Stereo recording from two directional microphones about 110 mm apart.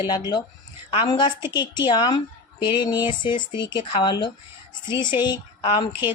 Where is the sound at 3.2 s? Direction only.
45° left (ahead or behind).